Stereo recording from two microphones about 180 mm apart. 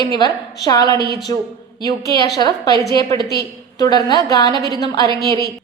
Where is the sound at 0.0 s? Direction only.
20° left (ahead or behind).